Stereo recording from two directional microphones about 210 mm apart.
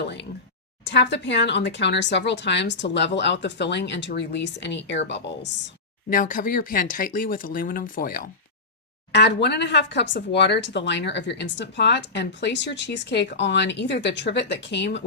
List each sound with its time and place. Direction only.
0.9 s speech: 55° left (ahead or behind)
6.1 s speech: 40° left (ahead or behind)
9.1 s speech: 55° left (ahead or behind)